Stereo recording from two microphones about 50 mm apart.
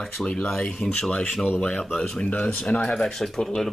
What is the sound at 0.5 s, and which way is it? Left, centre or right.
Speech, centre.